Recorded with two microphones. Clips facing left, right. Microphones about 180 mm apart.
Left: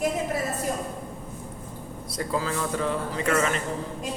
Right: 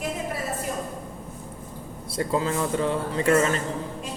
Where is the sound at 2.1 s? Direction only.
25° right (ahead or behind).